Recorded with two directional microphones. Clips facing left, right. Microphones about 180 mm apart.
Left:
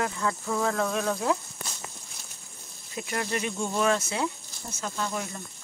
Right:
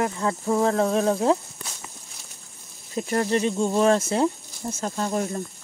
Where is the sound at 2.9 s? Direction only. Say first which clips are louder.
Right 8 dB; 35° right (ahead or behind).